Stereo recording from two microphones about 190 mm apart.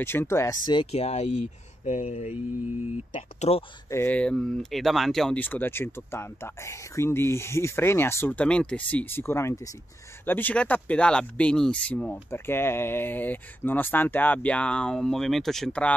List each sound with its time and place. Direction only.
0.0 s speech: 10° left (ahead or behind)
0.7 s speech: 30° left (ahead or behind)
3.9 s speech: 10° left (ahead or behind)